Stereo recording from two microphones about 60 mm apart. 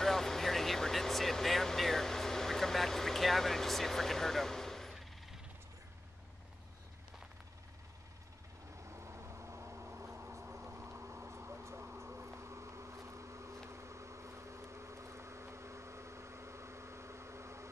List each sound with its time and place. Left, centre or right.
0.0 s vehicle: centre
8.8 s vehicle: right
10.5 s a sound: right
13.7 s vehicle: right